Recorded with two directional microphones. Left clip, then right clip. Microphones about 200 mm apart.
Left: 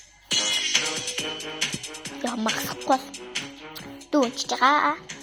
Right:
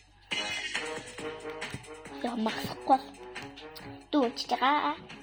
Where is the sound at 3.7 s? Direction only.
25° left (ahead or behind).